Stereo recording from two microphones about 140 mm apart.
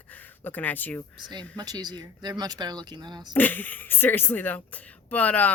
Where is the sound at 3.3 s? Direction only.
10° left (ahead or behind).